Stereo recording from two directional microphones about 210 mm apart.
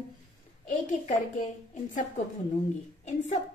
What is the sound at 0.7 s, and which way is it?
Speech, 40° left (ahead or behind).